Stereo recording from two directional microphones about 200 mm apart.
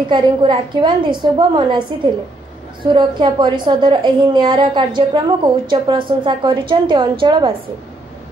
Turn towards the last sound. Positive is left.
turn(degrees=-25)  # may be behind; listen again after turning